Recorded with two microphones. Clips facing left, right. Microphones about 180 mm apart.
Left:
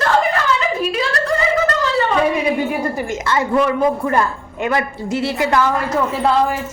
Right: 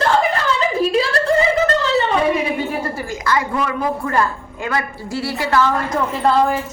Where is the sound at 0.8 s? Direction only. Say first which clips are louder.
Right 3 dB; 30° right (ahead or behind).